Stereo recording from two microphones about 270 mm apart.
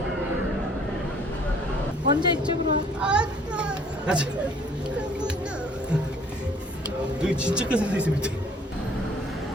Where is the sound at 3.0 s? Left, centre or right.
Centre.